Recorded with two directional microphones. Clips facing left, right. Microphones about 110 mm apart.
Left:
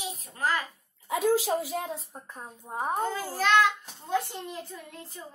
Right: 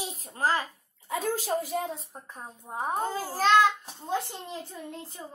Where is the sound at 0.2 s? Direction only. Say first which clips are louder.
Right 2 dB; 35° right (ahead or behind).